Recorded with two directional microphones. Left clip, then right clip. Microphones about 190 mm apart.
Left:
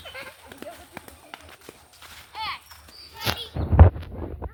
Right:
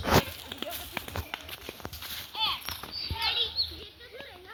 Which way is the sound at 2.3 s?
40° left (ahead or behind).